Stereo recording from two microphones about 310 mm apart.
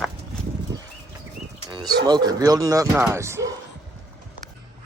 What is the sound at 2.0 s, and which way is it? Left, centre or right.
Speech, centre.